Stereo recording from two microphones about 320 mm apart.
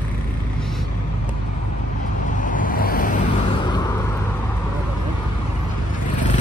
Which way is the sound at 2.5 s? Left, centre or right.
Left.